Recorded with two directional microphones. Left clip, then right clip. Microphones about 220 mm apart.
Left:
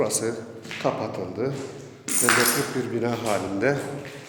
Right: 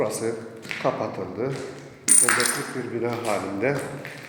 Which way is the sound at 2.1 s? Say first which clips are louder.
Right 6 dB; 55° right (ahead or behind).